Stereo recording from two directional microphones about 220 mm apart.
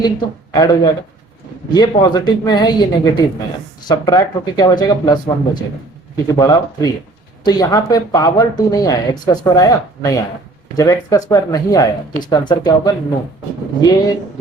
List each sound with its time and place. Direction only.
0.5 s speech: 15° left (ahead or behind)